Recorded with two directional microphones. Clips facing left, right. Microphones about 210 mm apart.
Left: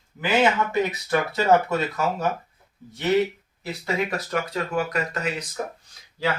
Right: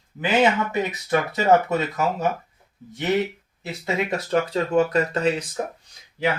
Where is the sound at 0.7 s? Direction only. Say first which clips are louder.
Even; 20° right (ahead or behind).